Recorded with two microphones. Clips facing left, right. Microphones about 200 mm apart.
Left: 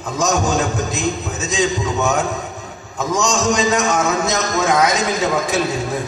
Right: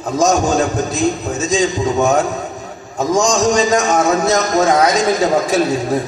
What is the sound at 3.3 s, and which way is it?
A man's voice, 35° right (ahead or behind).